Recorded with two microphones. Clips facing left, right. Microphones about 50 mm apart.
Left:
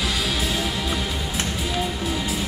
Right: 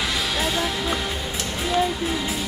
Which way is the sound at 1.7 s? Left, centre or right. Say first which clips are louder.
Right 8 dB; right.